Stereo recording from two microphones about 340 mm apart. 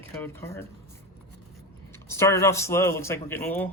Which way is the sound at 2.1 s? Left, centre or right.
Centre.